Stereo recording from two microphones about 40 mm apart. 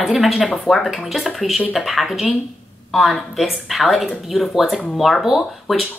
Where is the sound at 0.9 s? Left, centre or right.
Centre.